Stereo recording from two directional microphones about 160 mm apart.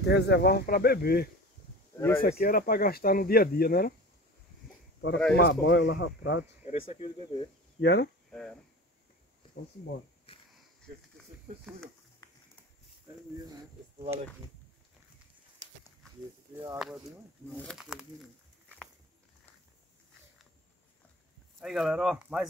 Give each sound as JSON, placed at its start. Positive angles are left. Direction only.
{"t": 0.0, "sound": "speech", "side_deg": 90}
{"t": 2.0, "sound": "speech", "side_deg": 15}
{"t": 2.2, "sound": "speech", "side_deg": 65}
{"t": 5.3, "sound": "speech", "side_deg": 90}
{"t": 6.6, "sound": "speech", "side_deg": 40}
{"t": 7.8, "sound": "speech", "side_deg": 90}
{"t": 8.3, "sound": "speech", "side_deg": 5}
{"t": 12.2, "sound": "a sound", "side_deg": 25}
{"t": 16.7, "sound": "speech", "side_deg": 0}
{"t": 21.5, "sound": "speech", "side_deg": 0}